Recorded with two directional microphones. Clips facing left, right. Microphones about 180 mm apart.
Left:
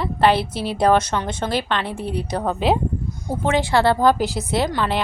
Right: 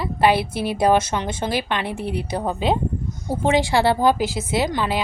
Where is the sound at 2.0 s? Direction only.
60° right (ahead or behind).